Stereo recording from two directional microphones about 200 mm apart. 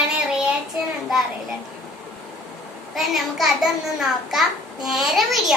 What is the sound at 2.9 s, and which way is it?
A child's voice, centre (ahead or behind).